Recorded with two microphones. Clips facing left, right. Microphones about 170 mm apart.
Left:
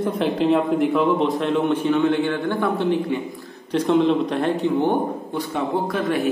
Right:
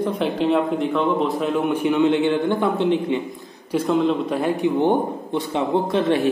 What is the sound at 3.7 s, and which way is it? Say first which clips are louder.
Speech: left 1 dB; 5° right (ahead or behind).